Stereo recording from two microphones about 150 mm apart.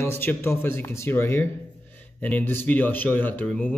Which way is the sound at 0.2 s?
15° left (ahead or behind).